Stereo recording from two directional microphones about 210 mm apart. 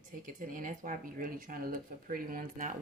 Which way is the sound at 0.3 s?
40° right (ahead or behind).